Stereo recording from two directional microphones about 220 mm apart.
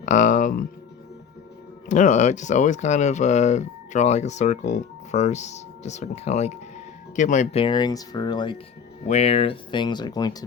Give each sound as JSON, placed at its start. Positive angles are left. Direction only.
{"t": 0.0, "sound": "speech", "side_deg": 35}
{"t": 1.9, "sound": "speech", "side_deg": 35}